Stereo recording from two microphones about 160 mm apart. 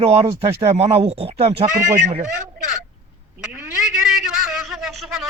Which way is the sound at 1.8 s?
55° right (ahead or behind).